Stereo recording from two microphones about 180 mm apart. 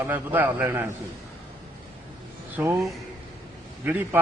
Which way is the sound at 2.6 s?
10° right (ahead or behind).